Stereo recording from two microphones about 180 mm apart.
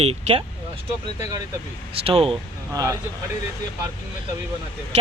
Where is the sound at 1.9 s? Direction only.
30° right (ahead or behind).